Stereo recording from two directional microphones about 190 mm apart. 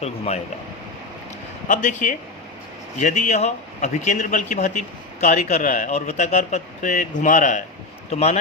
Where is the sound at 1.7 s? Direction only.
40° left (ahead or behind).